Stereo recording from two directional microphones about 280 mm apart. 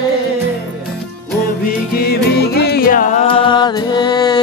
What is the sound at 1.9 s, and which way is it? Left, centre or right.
Music, left.